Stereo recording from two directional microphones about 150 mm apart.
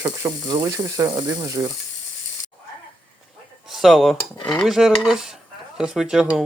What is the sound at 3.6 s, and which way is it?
Speech, centre (ahead or behind).